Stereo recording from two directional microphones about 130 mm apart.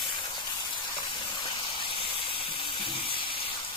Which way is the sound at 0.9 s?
40° left (ahead or behind).